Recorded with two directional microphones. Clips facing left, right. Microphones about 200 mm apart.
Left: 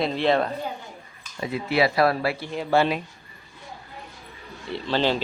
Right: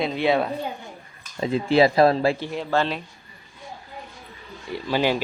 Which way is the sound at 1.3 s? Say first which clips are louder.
Right 5 dB; 25° right (ahead or behind).